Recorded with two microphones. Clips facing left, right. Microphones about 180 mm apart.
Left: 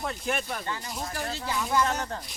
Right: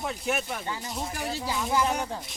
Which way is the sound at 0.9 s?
5° right (ahead or behind).